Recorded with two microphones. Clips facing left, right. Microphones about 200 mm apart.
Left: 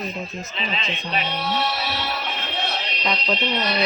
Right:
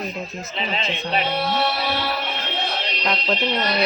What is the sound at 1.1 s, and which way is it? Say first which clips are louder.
Speech: right 3 dB; 35° right (ahead or behind).